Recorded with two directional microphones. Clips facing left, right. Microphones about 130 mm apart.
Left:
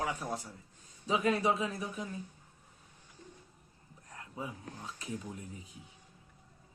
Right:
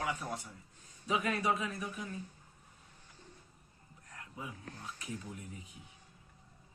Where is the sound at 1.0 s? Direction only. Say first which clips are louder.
Left 3 dB; 30° left (ahead or behind).